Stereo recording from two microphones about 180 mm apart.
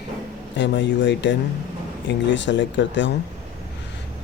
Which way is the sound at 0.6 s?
90° left.